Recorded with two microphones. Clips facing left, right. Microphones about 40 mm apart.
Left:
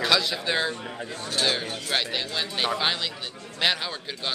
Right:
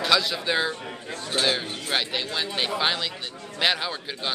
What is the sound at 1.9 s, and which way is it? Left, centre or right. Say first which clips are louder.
A man's voice: right 1 dB; centre.